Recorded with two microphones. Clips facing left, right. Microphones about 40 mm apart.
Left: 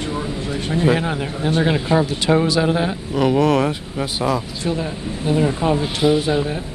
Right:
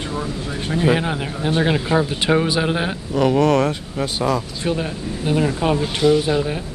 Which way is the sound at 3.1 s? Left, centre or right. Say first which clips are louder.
Even; centre.